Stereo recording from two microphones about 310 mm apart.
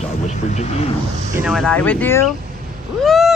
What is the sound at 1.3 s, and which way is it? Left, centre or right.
Speech, centre.